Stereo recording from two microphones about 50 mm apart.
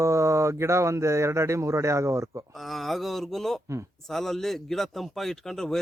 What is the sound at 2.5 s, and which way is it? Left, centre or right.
Speech, centre.